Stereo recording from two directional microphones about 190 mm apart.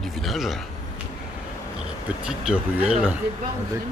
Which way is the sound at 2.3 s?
5° right (ahead or behind).